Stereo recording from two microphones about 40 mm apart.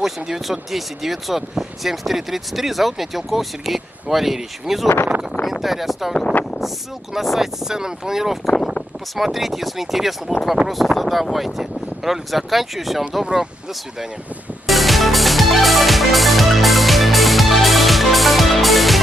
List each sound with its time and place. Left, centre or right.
0.0 s speech: centre
7.2 s speech: centre
13.2 s speech: centre
14.7 s music: centre